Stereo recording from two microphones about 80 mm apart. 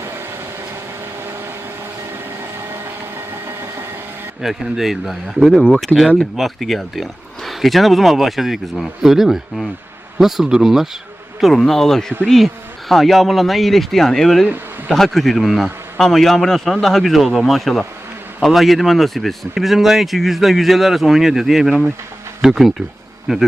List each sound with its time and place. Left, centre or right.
3.4 s a sound: right
4.4 s speech: centre
14.4 s speech: centre
14.9 s speech: centre